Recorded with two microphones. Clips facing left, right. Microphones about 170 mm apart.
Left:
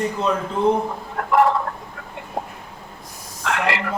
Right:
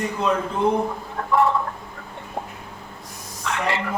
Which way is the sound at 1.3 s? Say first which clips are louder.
Left 3 dB; 90° left.